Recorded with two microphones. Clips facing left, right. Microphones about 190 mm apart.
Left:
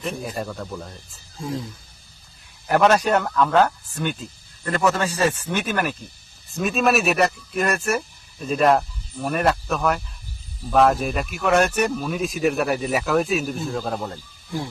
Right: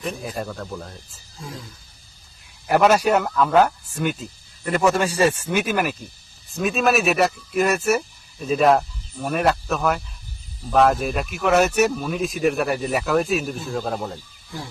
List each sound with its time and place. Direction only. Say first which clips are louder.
0.0 s speech: even; centre (ahead or behind)
1.4 s speech: left 8 dB; 30° left (ahead or behind)
2.6 s speech: right 1 dB; 5° right (ahead or behind)